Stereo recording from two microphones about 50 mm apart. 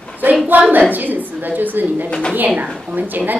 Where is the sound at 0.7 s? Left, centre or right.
Right.